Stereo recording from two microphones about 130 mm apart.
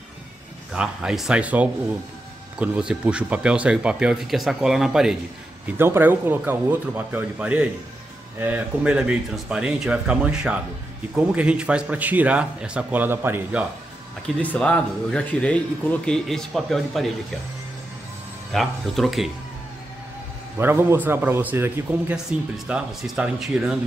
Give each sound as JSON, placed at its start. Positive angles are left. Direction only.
{"t": 0.7, "sound": "speech", "side_deg": -5}
{"t": 5.7, "sound": "speech", "side_deg": -15}
{"t": 14.2, "sound": "speech", "side_deg": 10}
{"t": 18.5, "sound": "speech", "side_deg": 0}
{"t": 20.5, "sound": "speech", "side_deg": -15}